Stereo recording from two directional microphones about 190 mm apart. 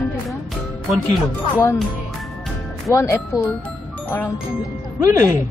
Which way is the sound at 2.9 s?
15° left (ahead or behind).